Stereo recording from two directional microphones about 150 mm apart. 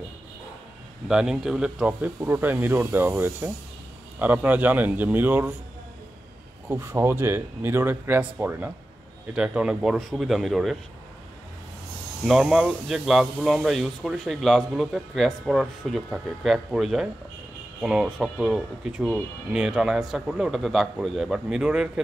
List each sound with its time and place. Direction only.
1.0 s speech: 5° right (ahead or behind)
6.7 s speech: 15° right (ahead or behind); by 10.8 s centre (ahead or behind)
12.3 s speech: 5° right (ahead or behind)